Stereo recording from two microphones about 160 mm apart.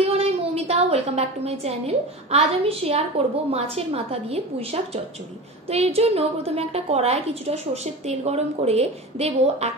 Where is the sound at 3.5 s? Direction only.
40° right (ahead or behind).